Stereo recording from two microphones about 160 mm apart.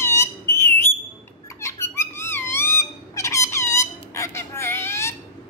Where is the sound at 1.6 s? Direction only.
15° left (ahead or behind).